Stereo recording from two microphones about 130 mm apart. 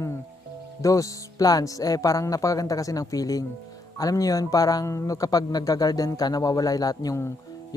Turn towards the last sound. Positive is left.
turn(degrees=25)  # may be behind; listen again after turning